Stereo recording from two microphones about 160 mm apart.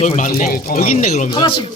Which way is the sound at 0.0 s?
45° left (ahead or behind).